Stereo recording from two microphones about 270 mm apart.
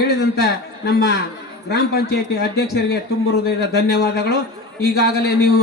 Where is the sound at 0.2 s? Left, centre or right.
Left.